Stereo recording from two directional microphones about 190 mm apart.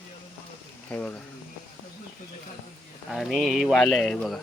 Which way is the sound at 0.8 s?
10° left (ahead or behind).